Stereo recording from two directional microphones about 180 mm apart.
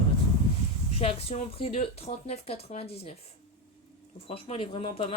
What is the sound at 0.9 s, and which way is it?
Speech, 35° left (ahead or behind).